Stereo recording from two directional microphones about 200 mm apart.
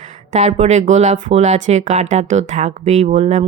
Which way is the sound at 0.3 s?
35° right (ahead or behind).